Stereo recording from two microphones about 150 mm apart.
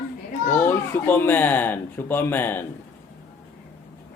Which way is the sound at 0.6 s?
15° left (ahead or behind).